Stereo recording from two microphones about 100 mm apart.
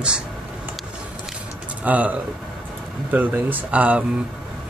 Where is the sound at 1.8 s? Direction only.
15° right (ahead or behind).